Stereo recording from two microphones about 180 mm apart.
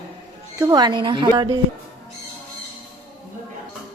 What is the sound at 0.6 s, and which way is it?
A woman's voice, 25° right (ahead or behind).